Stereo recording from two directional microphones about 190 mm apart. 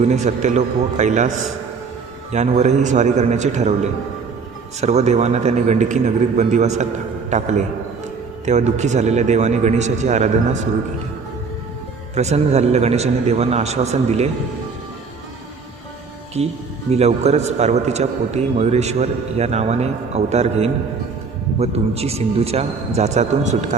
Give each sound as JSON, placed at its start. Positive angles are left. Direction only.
{"t": 0.0, "sound": "a man's voice", "side_deg": -35}
{"t": 2.3, "sound": "a man's voice", "side_deg": -35}
{"t": 4.8, "sound": "a man's voice", "side_deg": -35}
{"t": 12.1, "sound": "a man's voice", "side_deg": -35}
{"t": 16.4, "sound": "a man's voice", "side_deg": -35}